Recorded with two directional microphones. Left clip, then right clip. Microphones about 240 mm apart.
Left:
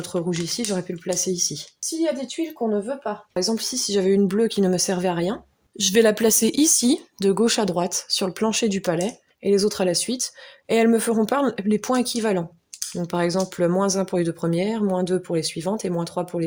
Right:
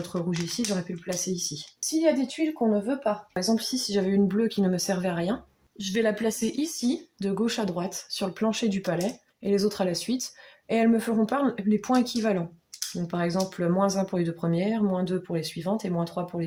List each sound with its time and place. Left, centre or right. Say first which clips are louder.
0.0 s speech: left 5 dB; left
5.7 s speech: left 9 dB; left